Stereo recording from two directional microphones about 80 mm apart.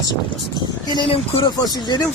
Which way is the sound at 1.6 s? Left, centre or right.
Left.